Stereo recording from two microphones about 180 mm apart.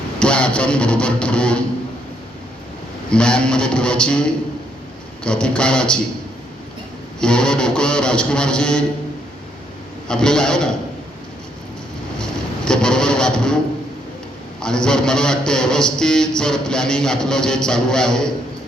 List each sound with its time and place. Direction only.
0.2 s a man's voice: 5° left (ahead or behind)
3.1 s a man's voice: 5° left (ahead or behind)
7.2 s a man's voice: 5° left (ahead or behind)
10.1 s a man's voice: 5° left (ahead or behind)
12.2 s a sound: 5° left (ahead or behind)
14.6 s a man's voice: 5° left (ahead or behind)